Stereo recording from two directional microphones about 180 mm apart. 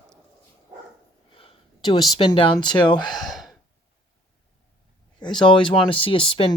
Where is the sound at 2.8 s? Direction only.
25° left (ahead or behind).